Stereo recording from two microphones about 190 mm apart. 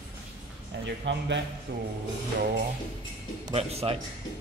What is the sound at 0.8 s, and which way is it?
Speech, 70° right (ahead or behind).